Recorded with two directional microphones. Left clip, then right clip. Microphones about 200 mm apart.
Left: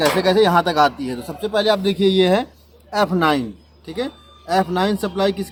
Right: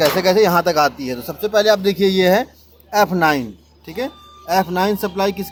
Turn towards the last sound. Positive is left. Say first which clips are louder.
# right 1 dB
turn(degrees=-20)  # may be behind; listen again after turning